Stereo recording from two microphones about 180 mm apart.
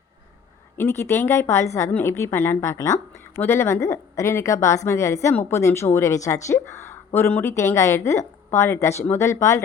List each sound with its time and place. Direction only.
0.8 s a woman's voice: 15° left (ahead or behind)